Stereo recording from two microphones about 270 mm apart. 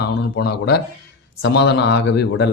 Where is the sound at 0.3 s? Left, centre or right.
Left.